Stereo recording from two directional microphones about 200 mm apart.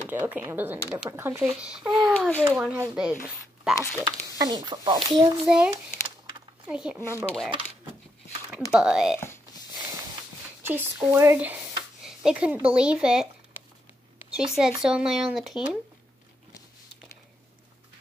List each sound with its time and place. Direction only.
0.3 s speech: 10° right (ahead or behind)
3.7 s speech: 15° left (ahead or behind)
4.0 s speech: 20° right (ahead or behind)
5.4 s speech: 5° right (ahead or behind)
6.7 s speech: 5° right (ahead or behind)
8.7 s speech: 5° right (ahead or behind)
10.6 s speech: 10° right (ahead or behind)
14.3 s speech: 5° right (ahead or behind)